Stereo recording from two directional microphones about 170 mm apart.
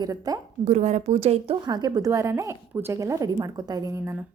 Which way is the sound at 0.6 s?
45° right (ahead or behind).